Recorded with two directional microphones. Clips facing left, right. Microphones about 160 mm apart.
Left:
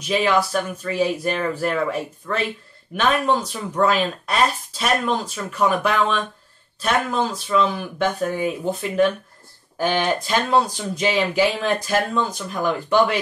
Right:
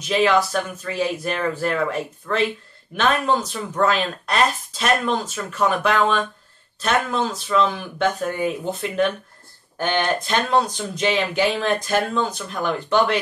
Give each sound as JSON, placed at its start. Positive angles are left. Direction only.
{"t": 0.1, "sound": "speech", "side_deg": 5}